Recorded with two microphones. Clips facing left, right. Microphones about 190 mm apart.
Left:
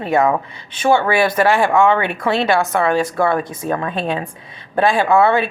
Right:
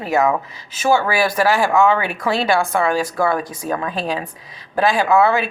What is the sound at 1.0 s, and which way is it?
Speech, 25° left (ahead or behind).